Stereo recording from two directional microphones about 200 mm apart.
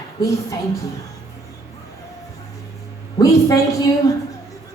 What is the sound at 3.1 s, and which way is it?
Speech, 15° left (ahead or behind).